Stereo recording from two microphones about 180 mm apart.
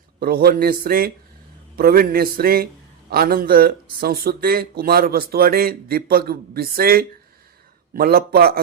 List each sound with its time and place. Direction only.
0.2 s speech: 55° right (ahead or behind)